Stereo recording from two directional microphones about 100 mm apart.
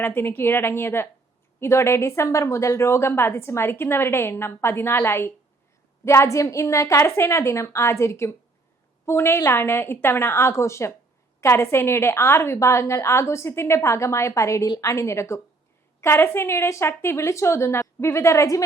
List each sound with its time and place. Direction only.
0.0 s a woman's voice: 20° left (ahead or behind)